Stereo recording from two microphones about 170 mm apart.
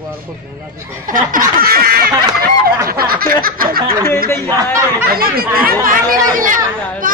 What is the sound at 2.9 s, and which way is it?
Snicker, 60° right (ahead or behind).